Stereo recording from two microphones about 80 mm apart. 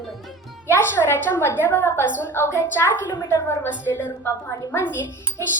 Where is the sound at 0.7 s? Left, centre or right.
Left.